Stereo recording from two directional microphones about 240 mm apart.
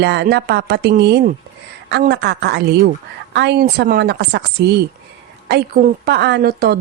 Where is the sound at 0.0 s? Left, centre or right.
Right.